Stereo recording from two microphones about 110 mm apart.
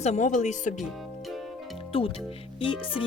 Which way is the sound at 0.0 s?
90° left.